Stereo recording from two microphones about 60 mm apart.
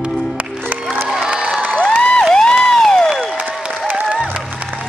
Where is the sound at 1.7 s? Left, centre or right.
Centre.